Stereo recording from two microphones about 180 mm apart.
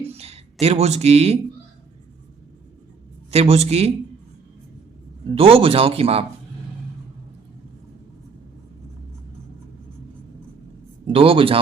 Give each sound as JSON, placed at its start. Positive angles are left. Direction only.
{"t": 0.0, "sound": "a sound", "side_deg": -35}
{"t": 0.6, "sound": "speech", "side_deg": -35}
{"t": 3.3, "sound": "speech", "side_deg": -35}
{"t": 5.3, "sound": "speech", "side_deg": -30}
{"t": 11.0, "sound": "speech", "side_deg": -30}